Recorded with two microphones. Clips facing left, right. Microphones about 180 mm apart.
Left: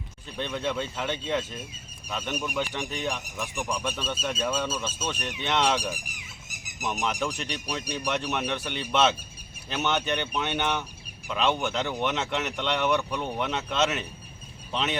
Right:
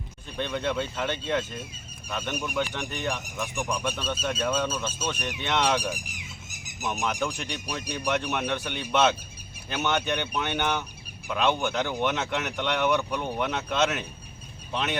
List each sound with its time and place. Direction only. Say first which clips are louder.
0.3 s speech: right 1 dB; centre (ahead or behind)